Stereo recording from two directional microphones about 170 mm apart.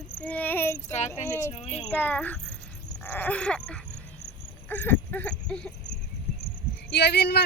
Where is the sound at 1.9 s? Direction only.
10° left (ahead or behind).